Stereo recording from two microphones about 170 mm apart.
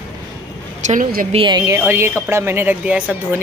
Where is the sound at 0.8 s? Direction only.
50° right (ahead or behind).